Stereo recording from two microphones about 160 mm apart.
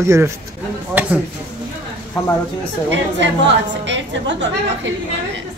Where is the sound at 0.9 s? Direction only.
10° right (ahead or behind).